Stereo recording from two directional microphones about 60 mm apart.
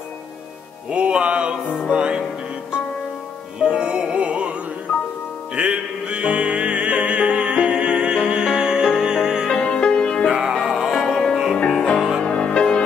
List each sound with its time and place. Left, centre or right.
0.8 s music: centre
3.5 s music: centre
9.6 s music: centre
10.3 s music: centre
11.5 s music: centre